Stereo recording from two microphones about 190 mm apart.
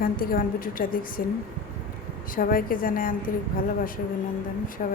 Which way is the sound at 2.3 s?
50° left (ahead or behind).